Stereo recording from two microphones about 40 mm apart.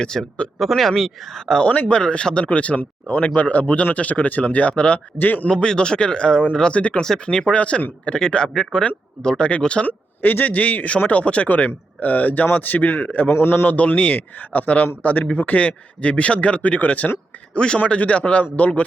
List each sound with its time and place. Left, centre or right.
0.0 s speech: centre
1.6 s speech: left
1.9 s speech: left
5.1 s speech: left
5.5 s speech: left
7.0 s speech: centre
7.5 s speech: left
8.7 s speech: left
9.8 s speech: left
13.3 s a man's voice: left
13.7 s speech: left
15.5 s speech: left
17.5 s a man's voice: left